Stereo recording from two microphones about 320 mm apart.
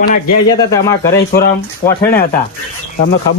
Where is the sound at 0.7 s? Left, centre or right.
Centre.